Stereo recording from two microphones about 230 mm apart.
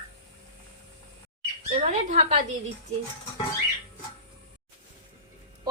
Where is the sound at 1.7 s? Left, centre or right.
Right.